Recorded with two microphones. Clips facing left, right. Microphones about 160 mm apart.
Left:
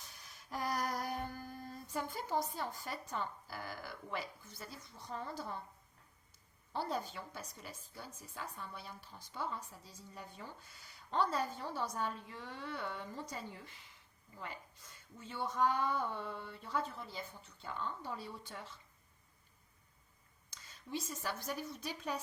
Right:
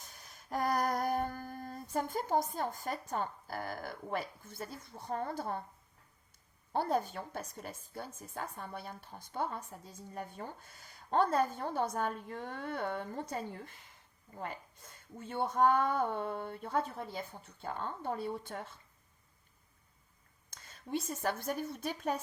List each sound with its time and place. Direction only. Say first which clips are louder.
0.0 s humming: right 2 dB; 45° right (ahead or behind)
6.7 s a woman's voice: right 7 dB; 55° right (ahead or behind)
20.5 s a woman's voice: right 6 dB; 55° right (ahead or behind)